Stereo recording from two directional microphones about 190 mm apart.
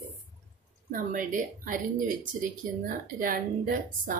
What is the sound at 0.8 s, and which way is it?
A woman's voice, 45° right (ahead or behind).